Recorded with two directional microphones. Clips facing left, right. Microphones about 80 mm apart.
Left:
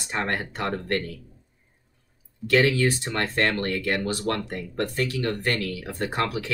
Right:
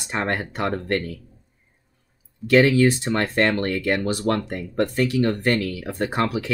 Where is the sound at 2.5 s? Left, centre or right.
Right.